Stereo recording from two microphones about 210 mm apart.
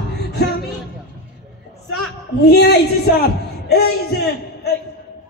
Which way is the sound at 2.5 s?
50° left (ahead or behind).